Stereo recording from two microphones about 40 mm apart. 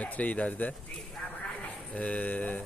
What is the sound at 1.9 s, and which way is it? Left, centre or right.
Speech, left.